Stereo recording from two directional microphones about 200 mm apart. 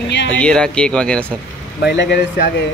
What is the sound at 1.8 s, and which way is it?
Speech, 65° left (ahead or behind).